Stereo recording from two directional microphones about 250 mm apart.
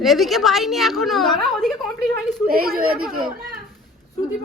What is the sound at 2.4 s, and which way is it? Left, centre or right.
Speech, right.